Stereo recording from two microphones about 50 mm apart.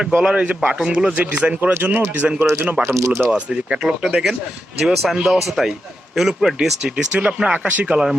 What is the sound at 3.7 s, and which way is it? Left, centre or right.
A man's voice, centre.